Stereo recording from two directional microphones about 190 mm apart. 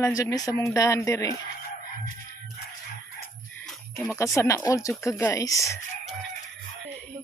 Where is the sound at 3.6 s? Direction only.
Centre (ahead or behind).